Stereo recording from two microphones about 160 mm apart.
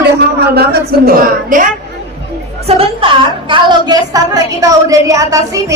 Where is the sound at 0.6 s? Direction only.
70° right (ahead or behind).